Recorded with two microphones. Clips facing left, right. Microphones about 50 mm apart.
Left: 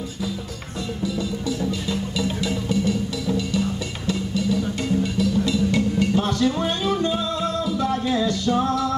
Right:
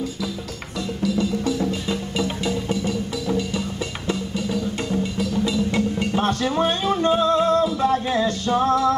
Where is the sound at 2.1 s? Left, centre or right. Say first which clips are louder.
Right 2 dB; right.